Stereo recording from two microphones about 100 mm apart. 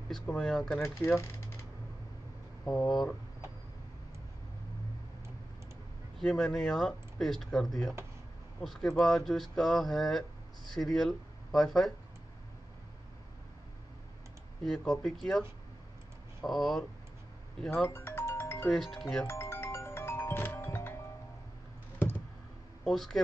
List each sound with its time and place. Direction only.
0.1 s speech: 5° left (ahead or behind)
0.8 s speech: 25° left (ahead or behind)
2.9 s speech: centre (ahead or behind)
6.1 s speech: 5° left (ahead or behind)
14.6 s speech: centre (ahead or behind)
16.4 s speech: centre (ahead or behind)
17.8 s music: 25° left (ahead or behind)
18.7 s speech: centre (ahead or behind)
19.2 s music: 25° left (ahead or behind)
22.8 s speech: 5° left (ahead or behind)